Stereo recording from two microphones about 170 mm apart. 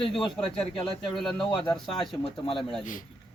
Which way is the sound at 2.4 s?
30° left (ahead or behind).